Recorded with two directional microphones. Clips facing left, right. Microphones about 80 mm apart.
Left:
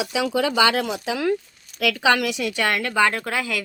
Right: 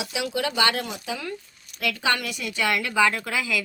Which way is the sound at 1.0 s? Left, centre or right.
Left.